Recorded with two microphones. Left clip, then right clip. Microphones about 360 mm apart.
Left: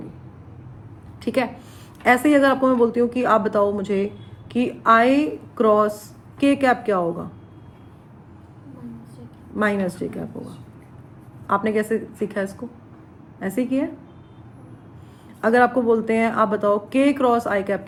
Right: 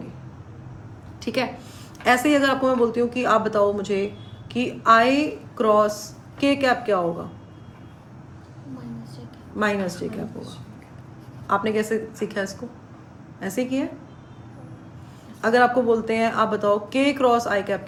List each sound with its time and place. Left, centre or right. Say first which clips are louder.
1.2 s a woman's voice: left 3 dB; centre
9.6 s speech: left 2 dB; centre
11.4 s speech: left 1 dB; centre
15.4 s speech: left 1 dB; centre